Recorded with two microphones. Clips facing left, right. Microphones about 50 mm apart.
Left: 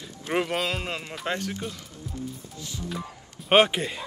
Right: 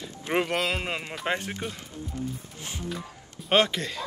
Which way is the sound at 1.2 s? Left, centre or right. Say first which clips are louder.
Even; right.